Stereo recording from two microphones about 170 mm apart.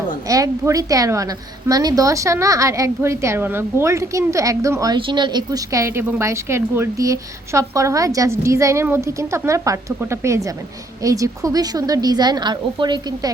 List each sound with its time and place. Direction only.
0.3 s a woman's voice: 20° right (ahead or behind)